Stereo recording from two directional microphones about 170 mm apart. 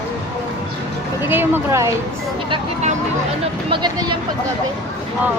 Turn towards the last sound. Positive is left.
turn(degrees=-25)  # may be behind; listen again after turning